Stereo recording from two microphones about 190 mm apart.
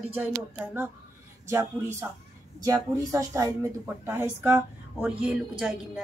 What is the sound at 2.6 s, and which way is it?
A woman's voice, 20° right (ahead or behind).